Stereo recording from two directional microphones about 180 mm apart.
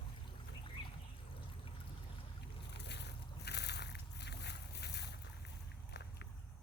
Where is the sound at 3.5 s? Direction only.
70° left (ahead or behind).